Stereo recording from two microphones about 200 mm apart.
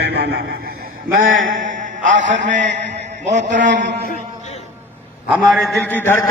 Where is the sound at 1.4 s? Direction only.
40° right (ahead or behind).